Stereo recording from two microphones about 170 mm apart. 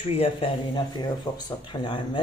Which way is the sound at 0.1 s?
35° left (ahead or behind).